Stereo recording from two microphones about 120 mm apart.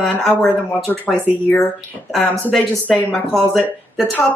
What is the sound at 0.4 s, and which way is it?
Speech, 10° left (ahead or behind).